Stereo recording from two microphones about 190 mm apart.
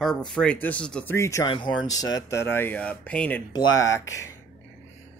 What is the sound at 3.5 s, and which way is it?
Speech, 20° left (ahead or behind).